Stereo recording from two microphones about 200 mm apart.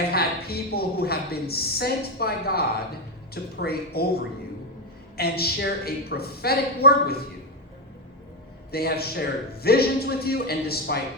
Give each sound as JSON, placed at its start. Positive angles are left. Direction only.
{"t": 0.1, "sound": "a woman's voice", "side_deg": 50}
{"t": 5.1, "sound": "a woman's voice", "side_deg": 50}
{"t": 8.7, "sound": "a woman's voice", "side_deg": 50}